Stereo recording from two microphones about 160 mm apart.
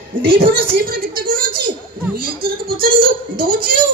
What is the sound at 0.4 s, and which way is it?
Speech, 65° right (ahead or behind).